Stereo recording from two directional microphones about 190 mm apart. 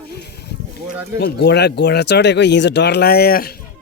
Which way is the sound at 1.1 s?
60° left (ahead or behind).